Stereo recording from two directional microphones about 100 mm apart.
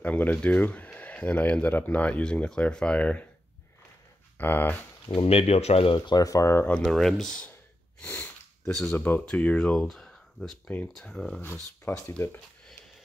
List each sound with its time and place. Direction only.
0.0 s speech: 15° left (ahead or behind)
4.4 s speech: 20° left (ahead or behind)
5.2 s speech: 85° left
5.9 s speech: 45° left (ahead or behind); by 6.7 s 25° left (ahead or behind)
6.9 s speech: 5° left (ahead or behind)
8.1 s sniff: 10° left (ahead or behind)
9.2 s speech: 10° left (ahead or behind)
9.8 s speech: centre (ahead or behind)
11.4 s speech: 20° left (ahead or behind)